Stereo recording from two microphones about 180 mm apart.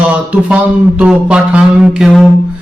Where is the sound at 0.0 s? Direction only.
5° right (ahead or behind).